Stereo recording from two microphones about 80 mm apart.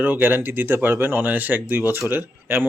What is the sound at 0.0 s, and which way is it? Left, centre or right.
Speech, right.